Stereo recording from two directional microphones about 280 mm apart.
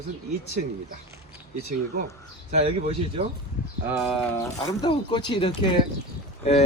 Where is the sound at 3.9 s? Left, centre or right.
Centre.